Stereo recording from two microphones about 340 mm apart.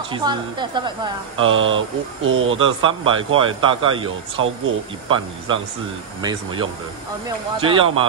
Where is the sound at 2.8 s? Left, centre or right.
Centre.